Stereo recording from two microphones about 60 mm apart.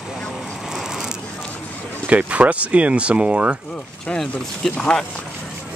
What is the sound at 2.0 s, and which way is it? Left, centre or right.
Speech, right.